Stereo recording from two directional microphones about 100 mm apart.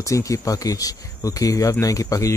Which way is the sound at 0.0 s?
30° left (ahead or behind).